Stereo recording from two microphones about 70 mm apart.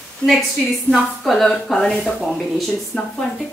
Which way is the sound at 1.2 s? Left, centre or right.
Centre.